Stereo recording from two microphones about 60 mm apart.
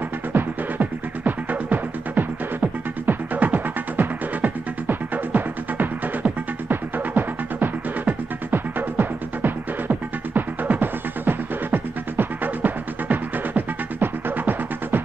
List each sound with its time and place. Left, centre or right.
0.3 s music: right